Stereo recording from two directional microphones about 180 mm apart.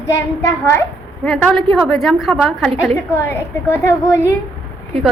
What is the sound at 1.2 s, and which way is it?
A woman's voice, centre (ahead or behind).